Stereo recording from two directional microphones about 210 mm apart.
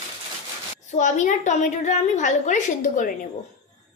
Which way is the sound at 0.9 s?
35° left (ahead or behind).